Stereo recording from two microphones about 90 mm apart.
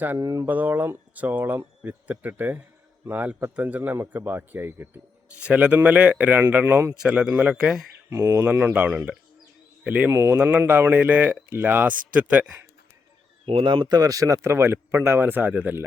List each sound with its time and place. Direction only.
0.2 s speech: 40° right (ahead or behind)
0.4 s a man's voice: 20° right (ahead or behind)
7.0 s a man's voice: 10° right (ahead or behind)
8.1 s speech: 30° right (ahead or behind)
8.7 s a man's voice: 15° right (ahead or behind)
10.1 s speech: 30° right (ahead or behind)
10.3 s a man's voice: 15° right (ahead or behind)
13.4 s speech: 85° right; by 15.8 s 15° right (ahead or behind)